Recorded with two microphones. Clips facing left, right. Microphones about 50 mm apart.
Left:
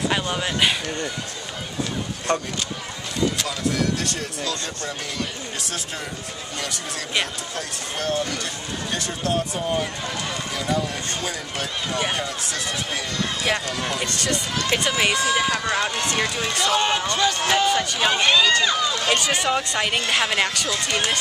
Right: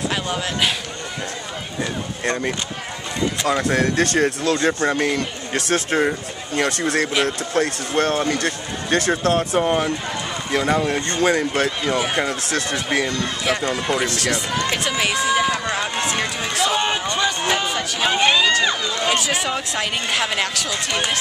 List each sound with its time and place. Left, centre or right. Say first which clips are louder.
0.1 s speech: even; centre
3.4 s speech: right 5 dB; right
9.6 s speech: right 6 dB; right
13.7 s speech: right 5 dB; right
13.9 s speech: right 4 dB; centre
18.2 s speech: right 2 dB; centre
19.1 s speech: even; centre